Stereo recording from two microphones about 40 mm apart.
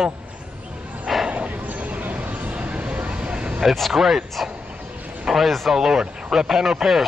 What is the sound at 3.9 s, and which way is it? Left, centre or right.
A man's voice, centre.